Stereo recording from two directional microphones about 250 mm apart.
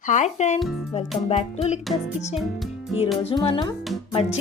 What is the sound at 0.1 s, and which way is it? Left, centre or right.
Speech, left.